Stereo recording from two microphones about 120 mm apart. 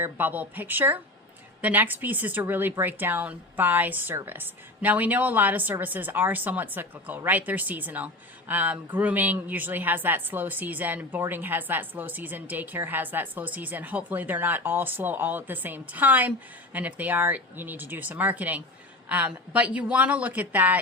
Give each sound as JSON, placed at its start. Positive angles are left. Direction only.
{"t": 0.0, "sound": "speech", "side_deg": -15}